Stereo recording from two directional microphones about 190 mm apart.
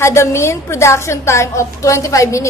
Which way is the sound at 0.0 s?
15° left (ahead or behind).